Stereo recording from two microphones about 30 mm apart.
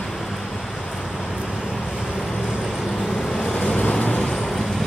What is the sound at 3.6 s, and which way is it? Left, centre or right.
Vehicle, left.